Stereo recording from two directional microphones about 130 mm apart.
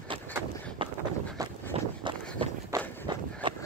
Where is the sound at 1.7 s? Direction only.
50° right (ahead or behind).